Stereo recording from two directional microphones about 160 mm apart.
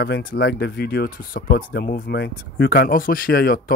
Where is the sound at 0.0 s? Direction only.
70° left (ahead or behind).